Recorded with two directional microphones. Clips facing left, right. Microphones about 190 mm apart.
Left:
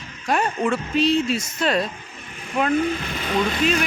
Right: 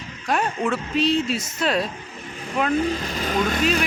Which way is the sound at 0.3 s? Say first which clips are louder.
Left 1 dB; centre (ahead or behind).